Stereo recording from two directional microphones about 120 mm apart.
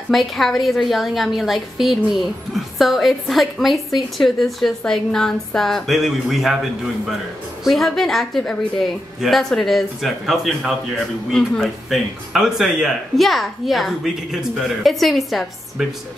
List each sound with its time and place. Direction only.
0.1 s a woman's voice: centre (ahead or behind)
7.6 s a woman's voice: centre (ahead or behind)